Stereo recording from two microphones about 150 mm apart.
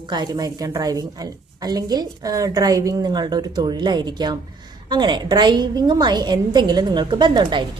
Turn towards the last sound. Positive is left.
turn(degrees=-30)  # may be behind; listen again after turning